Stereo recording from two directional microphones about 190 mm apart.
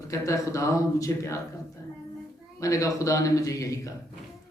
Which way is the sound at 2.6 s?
15° left (ahead or behind).